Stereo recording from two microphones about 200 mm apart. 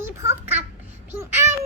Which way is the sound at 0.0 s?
10° right (ahead or behind).